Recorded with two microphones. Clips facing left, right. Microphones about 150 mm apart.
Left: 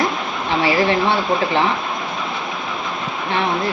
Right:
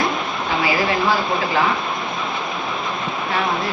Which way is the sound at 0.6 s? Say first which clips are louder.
Left 4 dB; 30° left (ahead or behind).